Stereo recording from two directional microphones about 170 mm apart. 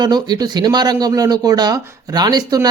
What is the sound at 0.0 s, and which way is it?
Speech, 25° right (ahead or behind).